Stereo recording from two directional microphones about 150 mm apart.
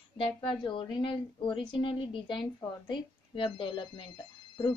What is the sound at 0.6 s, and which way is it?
A woman's voice, 35° left (ahead or behind).